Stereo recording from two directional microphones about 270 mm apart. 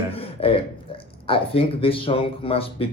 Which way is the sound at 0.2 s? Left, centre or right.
Left.